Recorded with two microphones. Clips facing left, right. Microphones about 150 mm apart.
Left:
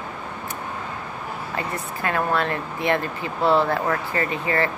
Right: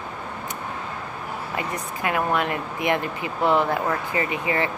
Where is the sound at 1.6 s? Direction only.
15° right (ahead or behind).